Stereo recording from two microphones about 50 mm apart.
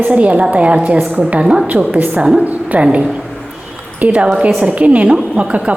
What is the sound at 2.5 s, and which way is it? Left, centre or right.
A woman's voice, right.